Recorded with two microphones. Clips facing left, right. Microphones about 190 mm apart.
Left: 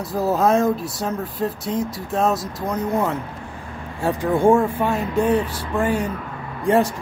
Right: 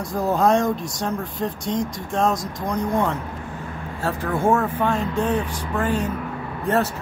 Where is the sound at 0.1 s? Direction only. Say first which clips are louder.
Left 1 dB; 5° left (ahead or behind).